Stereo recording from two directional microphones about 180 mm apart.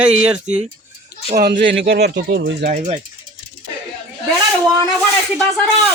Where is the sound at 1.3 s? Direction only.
60° right (ahead or behind); by 2.5 s 80° right.